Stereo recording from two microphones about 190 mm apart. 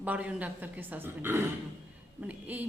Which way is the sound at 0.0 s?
5° right (ahead or behind).